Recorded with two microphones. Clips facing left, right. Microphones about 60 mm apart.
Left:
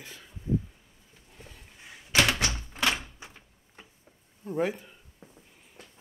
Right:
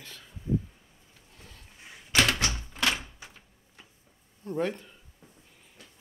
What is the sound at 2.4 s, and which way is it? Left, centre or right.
Typewriter, left.